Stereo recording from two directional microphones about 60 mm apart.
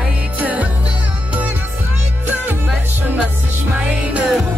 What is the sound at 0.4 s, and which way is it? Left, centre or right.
Music, right.